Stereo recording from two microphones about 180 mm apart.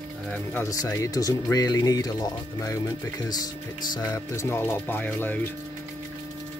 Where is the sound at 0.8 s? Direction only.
20° left (ahead or behind).